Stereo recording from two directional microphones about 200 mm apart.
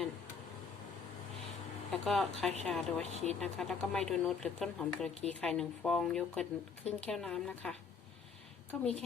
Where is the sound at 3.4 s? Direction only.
5° left (ahead or behind).